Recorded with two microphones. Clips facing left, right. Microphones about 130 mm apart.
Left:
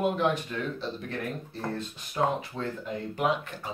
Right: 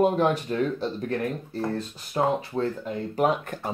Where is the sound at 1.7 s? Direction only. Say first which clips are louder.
Right 4 dB; 35° right (ahead or behind).